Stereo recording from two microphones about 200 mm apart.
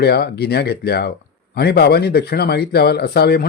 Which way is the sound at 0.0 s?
50° left (ahead or behind).